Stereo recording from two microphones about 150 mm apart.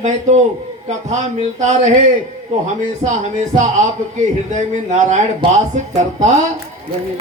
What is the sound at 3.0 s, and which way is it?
Speech, 35° right (ahead or behind).